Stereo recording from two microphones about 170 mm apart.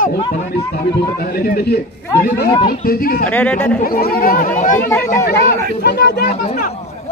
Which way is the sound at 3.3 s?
10° left (ahead or behind).